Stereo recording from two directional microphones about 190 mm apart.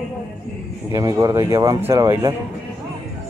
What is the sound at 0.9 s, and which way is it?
Speech, 20° right (ahead or behind).